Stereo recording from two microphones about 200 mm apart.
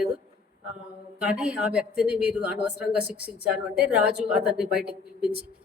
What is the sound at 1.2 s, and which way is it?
A woman's voice, 5° right (ahead or behind).